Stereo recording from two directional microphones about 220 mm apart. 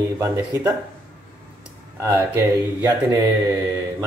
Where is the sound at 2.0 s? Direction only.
10° right (ahead or behind).